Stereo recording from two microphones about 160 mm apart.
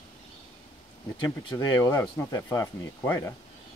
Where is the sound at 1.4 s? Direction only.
25° left (ahead or behind).